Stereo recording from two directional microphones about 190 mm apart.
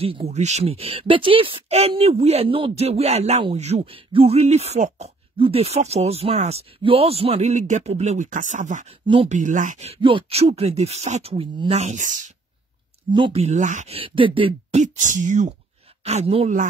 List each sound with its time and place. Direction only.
0.0 s speech: 30° right (ahead or behind)
9.0 s speech: 25° right (ahead or behind)
9.3 s speech: 40° right (ahead or behind)
13.1 s speech: 30° right (ahead or behind)